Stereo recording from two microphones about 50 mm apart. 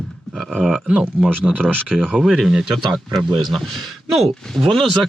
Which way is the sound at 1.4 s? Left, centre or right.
Centre.